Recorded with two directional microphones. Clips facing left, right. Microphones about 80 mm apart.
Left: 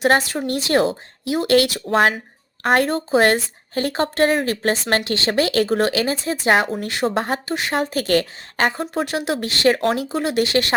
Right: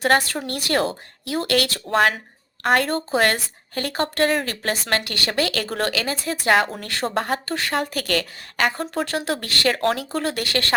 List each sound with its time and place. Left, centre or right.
0.0 s speech: left
9.0 s speech: centre